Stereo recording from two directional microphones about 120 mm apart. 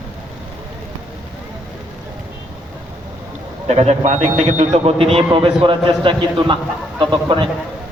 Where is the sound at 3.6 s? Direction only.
60° right (ahead or behind); by 7.5 s 45° right (ahead or behind).